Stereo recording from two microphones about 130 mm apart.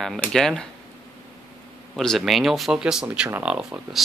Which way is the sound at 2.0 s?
Centre (ahead or behind).